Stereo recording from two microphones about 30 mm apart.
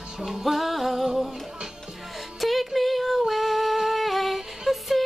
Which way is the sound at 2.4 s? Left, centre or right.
Centre.